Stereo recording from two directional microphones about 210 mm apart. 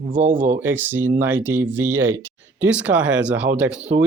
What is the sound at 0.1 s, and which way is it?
Speech, 40° right (ahead or behind).